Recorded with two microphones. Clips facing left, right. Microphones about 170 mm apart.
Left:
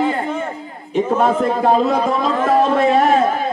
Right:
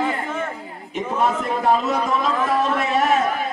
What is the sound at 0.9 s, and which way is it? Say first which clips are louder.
A man's voice: left 6 dB; 30° left (ahead or behind).